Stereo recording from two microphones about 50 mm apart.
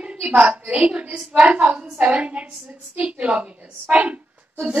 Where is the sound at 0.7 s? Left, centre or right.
Right.